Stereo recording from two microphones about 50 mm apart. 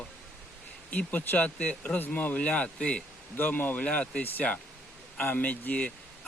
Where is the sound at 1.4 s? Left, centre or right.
Left.